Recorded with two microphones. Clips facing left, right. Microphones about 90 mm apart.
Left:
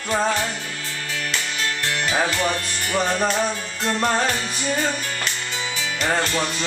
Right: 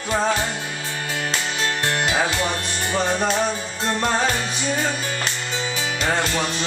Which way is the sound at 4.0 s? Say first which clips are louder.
Even; 5° right (ahead or behind).